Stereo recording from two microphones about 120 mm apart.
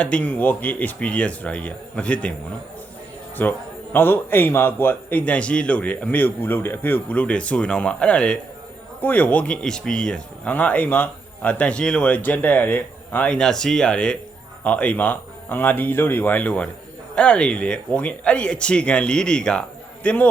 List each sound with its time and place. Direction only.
0.0 s a man's voice: 10° left (ahead or behind)
3.4 s a man's voice: 15° left (ahead or behind)